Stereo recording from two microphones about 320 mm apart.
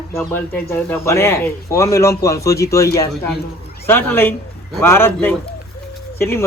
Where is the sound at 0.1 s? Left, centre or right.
Centre.